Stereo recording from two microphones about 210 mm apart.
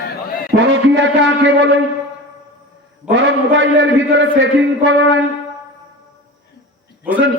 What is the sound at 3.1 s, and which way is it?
A man's voice, 60° right (ahead or behind).